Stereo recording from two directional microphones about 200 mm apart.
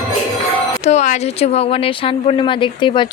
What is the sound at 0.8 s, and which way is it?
Speech, 35° left (ahead or behind).